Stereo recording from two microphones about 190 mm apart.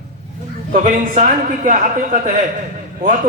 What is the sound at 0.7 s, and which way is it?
A man's voice, 45° right (ahead or behind).